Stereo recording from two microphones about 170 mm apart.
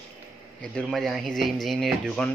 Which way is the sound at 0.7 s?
5° left (ahead or behind).